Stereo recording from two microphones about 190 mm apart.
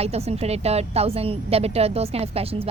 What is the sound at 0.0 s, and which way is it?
A woman's voice, 35° right (ahead or behind).